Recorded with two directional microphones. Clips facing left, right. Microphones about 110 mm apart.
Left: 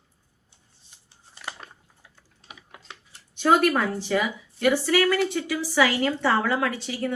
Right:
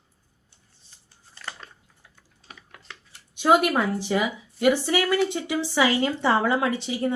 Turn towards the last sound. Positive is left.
turn(degrees=-20)  # may be behind; listen again after turning